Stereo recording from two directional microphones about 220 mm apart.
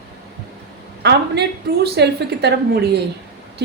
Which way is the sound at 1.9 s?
50° right (ahead or behind).